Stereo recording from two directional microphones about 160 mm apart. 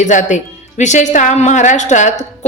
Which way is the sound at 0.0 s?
50° left (ahead or behind).